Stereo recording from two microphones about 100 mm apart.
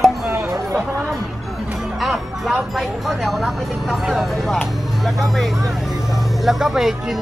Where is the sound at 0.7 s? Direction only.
30° right (ahead or behind).